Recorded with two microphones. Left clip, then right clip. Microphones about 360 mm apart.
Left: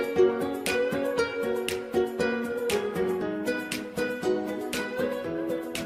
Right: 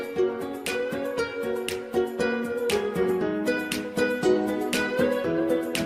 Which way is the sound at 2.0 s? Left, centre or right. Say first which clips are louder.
Right 1 dB; centre.